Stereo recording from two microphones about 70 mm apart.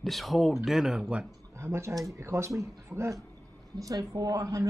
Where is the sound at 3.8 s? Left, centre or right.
Right.